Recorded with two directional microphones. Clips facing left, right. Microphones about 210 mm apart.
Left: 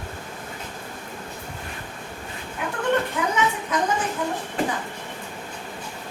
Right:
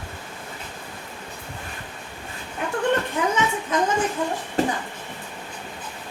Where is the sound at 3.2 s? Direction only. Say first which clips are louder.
Right 2 dB; 30° right (ahead or behind).